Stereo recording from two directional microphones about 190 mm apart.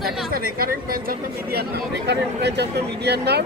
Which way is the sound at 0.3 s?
50° right (ahead or behind).